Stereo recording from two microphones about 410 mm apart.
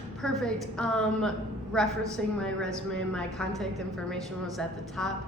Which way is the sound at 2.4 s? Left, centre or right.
Centre.